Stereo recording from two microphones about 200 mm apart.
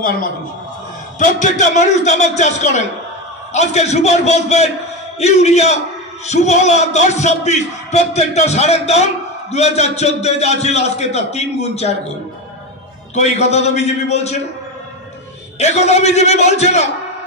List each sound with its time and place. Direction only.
1.2 s speech: 35° left (ahead or behind)
13.1 s speech: 35° left (ahead or behind)
15.6 s speech: 35° left (ahead or behind)